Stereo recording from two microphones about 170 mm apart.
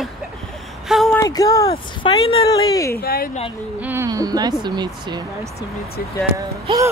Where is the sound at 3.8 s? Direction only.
10° right (ahead or behind).